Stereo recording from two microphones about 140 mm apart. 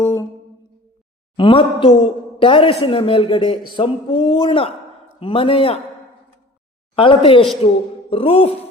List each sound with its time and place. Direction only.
0.0 s a sound: 25° left (ahead or behind)
1.4 s a woman's voice: 40° left (ahead or behind)
6.9 s a woman's voice: 40° left (ahead or behind)
8.1 s music: 45° left (ahead or behind)